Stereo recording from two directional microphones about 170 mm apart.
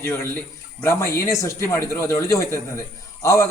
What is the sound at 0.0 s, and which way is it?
A man's voice, 15° left (ahead or behind).